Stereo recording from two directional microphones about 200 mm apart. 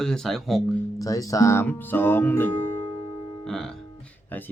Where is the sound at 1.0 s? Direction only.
15° left (ahead or behind).